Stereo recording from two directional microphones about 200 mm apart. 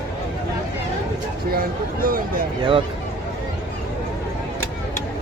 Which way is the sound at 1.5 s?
45° right (ahead or behind).